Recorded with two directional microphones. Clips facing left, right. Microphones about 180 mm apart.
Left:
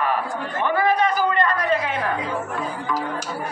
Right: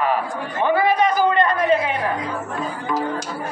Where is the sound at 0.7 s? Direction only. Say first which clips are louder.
Right 2 dB; 15° right (ahead or behind).